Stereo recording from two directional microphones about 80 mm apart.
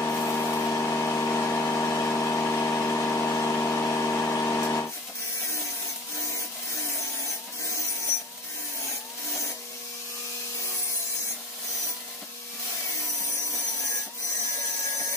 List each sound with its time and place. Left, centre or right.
0.0 s vehicle: left